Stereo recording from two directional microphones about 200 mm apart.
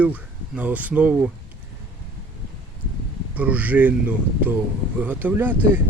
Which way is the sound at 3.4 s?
5° right (ahead or behind).